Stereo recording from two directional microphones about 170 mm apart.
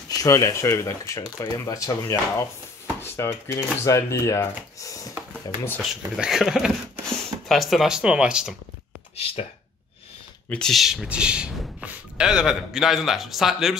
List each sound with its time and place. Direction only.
0.1 s speech: 20° left (ahead or behind)
5.8 s speech: 5° right (ahead or behind)
9.1 s speech: 35° left (ahead or behind)
10.5 s speech: centre (ahead or behind)